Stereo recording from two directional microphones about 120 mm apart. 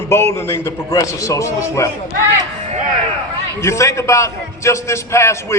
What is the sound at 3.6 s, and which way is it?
A man's voice, 25° left (ahead or behind).